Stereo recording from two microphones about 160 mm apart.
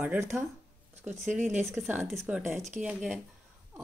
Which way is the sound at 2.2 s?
10° right (ahead or behind).